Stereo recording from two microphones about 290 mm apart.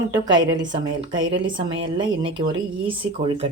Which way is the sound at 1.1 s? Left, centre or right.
Right.